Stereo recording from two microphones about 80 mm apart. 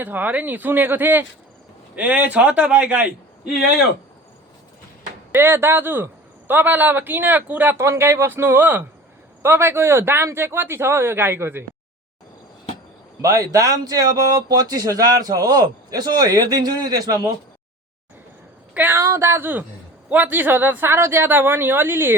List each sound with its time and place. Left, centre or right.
0.0 s speech: right
2.0 s a man's voice: centre
5.3 s speech: right
7.8 s speech: right
13.2 s speech: right
18.7 s speech: right